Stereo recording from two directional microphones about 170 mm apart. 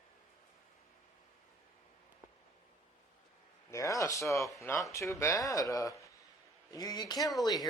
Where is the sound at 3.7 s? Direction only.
20° left (ahead or behind).